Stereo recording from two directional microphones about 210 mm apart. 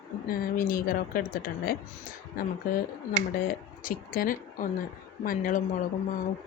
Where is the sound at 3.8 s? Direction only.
40° left (ahead or behind).